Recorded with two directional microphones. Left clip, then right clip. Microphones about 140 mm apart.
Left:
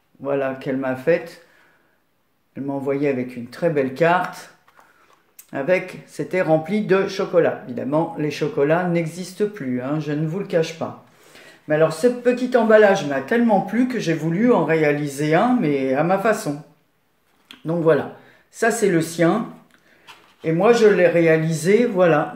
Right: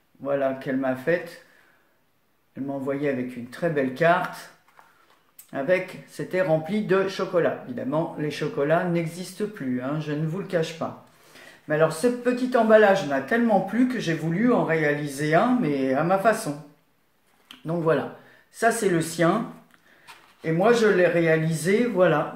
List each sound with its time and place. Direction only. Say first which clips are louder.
0.2 s speech: left 2 dB; 30° left (ahead or behind)
2.5 s speech: left 5 dB; 30° left (ahead or behind)
5.5 s speech: left 3 dB; 30° left (ahead or behind)
17.5 s speech: left 6 dB; 30° left (ahead or behind)
20.4 s speech: left 5 dB; 30° left (ahead or behind)